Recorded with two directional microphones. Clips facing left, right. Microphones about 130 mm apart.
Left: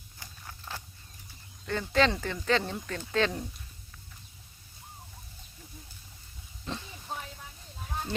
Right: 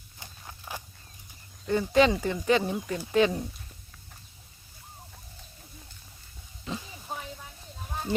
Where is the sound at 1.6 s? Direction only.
15° right (ahead or behind).